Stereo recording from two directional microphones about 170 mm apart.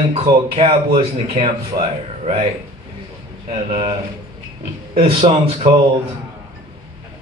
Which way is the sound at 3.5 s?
30° right (ahead or behind).